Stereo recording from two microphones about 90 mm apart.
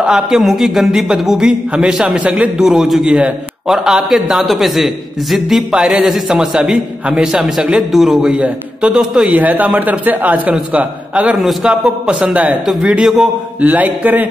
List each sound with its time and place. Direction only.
0.0 s a man's voice: 5° right (ahead or behind)
2.6 s a man's voice: 5° right (ahead or behind)
11.3 s a man's voice: centre (ahead or behind)
11.7 s a man's voice: 10° right (ahead or behind)
13.6 s speech: 15° right (ahead or behind)